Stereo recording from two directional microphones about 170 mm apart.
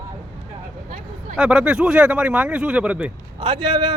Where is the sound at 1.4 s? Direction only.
5° right (ahead or behind).